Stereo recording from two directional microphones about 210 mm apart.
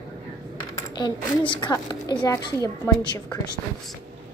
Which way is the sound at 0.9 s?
20° left (ahead or behind).